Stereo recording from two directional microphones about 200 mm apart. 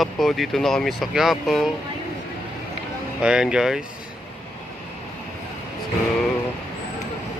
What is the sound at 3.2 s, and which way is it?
Speech, 5° right (ahead or behind).